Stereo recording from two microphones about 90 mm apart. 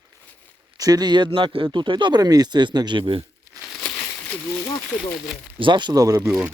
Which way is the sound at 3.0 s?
90° right.